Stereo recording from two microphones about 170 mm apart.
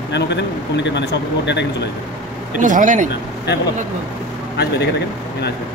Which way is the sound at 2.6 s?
50° right (ahead or behind).